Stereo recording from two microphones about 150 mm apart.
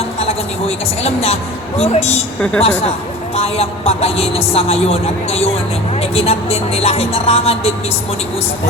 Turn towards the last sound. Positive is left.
turn(degrees=40)  # may be behind; listen again after turning